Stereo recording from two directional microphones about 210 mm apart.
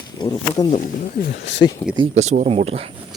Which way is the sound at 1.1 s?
45° left (ahead or behind).